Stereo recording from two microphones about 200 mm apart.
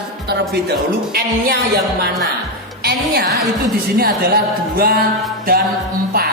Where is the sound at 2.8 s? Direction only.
50° right (ahead or behind).